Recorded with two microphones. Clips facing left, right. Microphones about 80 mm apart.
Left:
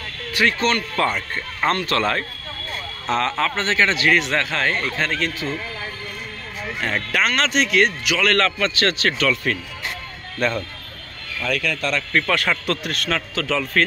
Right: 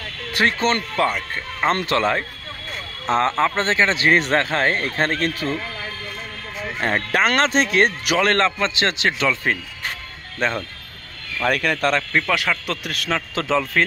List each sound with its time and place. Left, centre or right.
0.3 s speech: right
0.9 s speech: centre
1.7 s speech: right
2.0 s speech: centre
3.1 s a man's voice: right
6.8 s a man's voice: right
8.3 s speech: right
11.4 s speech: right
12.1 s speech: centre
13.3 s speech: right